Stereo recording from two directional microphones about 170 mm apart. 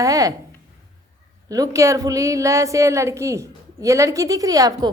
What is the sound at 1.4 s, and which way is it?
A woman's voice, 20° right (ahead or behind).